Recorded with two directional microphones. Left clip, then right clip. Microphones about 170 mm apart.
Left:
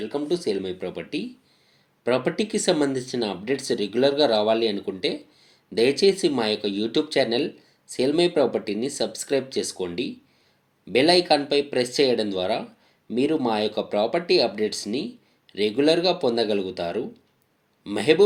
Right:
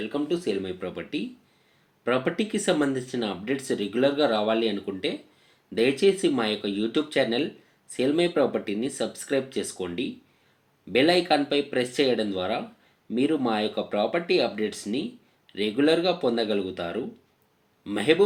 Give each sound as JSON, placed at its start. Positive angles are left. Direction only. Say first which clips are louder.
{"t": 0.1, "sound": "speech", "louder": "left 3 dB", "side_deg": 35}